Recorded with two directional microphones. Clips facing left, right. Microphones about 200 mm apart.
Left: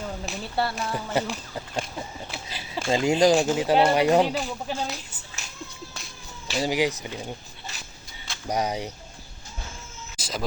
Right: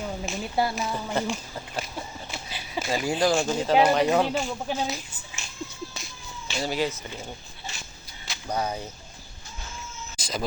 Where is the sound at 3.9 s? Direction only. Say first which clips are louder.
Left 2 dB; 10° left (ahead or behind).